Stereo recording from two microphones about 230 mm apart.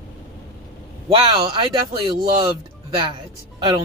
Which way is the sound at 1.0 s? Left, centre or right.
Right.